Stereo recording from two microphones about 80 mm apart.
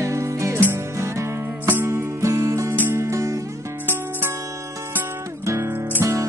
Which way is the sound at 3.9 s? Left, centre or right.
Right.